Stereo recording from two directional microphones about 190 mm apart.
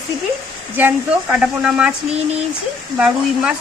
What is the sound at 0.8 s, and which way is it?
Speech, 10° right (ahead or behind).